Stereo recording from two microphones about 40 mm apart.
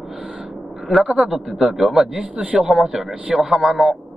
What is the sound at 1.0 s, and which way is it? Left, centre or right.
Speech, right.